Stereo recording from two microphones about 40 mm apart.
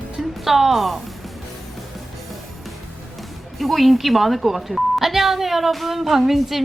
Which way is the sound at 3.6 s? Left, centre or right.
Centre.